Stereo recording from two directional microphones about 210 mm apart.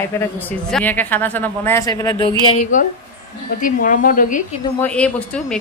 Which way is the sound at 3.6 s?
40° left (ahead or behind).